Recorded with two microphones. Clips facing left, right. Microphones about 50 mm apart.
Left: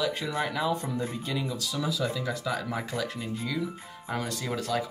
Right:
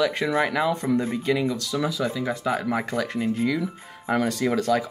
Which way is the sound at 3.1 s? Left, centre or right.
Right.